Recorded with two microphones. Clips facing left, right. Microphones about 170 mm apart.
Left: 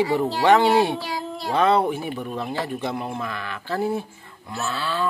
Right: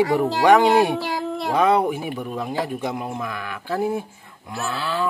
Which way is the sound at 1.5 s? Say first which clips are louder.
Right 1 dB; 10° right (ahead or behind).